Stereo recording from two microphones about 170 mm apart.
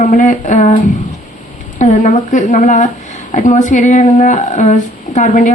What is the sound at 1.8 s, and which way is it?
Speech, 45° left (ahead or behind).